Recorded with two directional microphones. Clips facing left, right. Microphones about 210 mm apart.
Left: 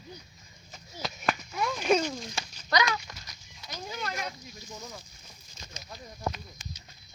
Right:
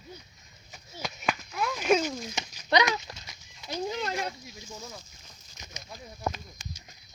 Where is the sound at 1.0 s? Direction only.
Centre (ahead or behind).